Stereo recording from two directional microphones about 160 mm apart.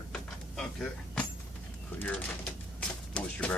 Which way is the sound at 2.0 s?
10° left (ahead or behind).